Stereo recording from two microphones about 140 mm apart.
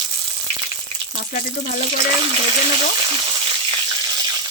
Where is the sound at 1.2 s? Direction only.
90° left.